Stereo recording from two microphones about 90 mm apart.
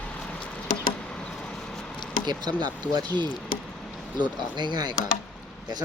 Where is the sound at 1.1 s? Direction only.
10° left (ahead or behind).